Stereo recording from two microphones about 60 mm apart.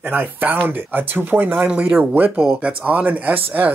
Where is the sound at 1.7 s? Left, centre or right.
Centre.